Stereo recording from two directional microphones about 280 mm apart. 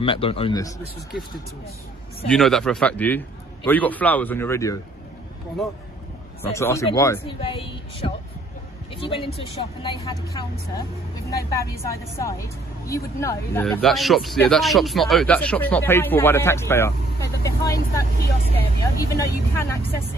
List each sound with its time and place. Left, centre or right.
0.0 s a man's voice: centre
2.2 s a woman's voice: centre
6.5 s a woman's voice: centre